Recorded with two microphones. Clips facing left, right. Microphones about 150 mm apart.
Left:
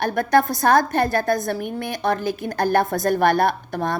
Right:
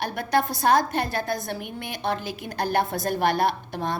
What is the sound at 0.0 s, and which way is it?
A woman's voice, 45° left (ahead or behind).